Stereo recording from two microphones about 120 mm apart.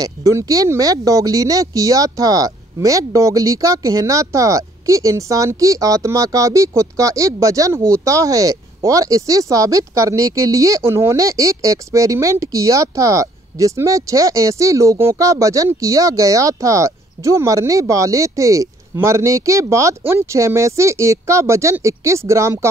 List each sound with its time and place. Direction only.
0.0 s speech: 25° right (ahead or behind)